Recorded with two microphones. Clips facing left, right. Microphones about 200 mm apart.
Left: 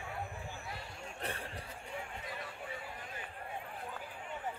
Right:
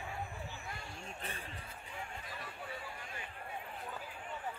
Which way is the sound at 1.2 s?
70° left (ahead or behind).